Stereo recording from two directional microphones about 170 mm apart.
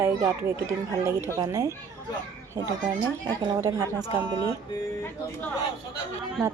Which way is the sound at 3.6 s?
20° right (ahead or behind).